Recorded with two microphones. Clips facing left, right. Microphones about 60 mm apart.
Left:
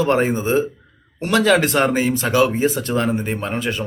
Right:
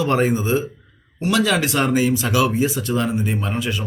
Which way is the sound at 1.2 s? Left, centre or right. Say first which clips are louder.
Left 3 dB; left.